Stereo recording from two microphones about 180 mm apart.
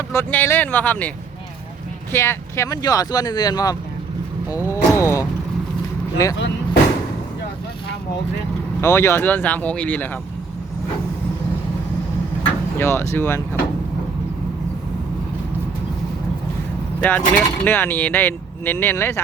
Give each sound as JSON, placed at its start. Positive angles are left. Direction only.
{"t": 0.1, "sound": "speech", "side_deg": 10}
{"t": 2.1, "sound": "speech", "side_deg": 15}
{"t": 4.7, "sound": "a sound", "side_deg": 15}
{"t": 8.8, "sound": "speech", "side_deg": 15}
{"t": 12.8, "sound": "speech", "side_deg": 15}
{"t": 17.0, "sound": "speech", "side_deg": 10}